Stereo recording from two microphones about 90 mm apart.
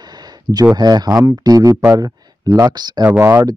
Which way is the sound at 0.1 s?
50° right (ahead or behind).